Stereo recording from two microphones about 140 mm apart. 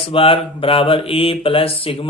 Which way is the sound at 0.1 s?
40° left (ahead or behind).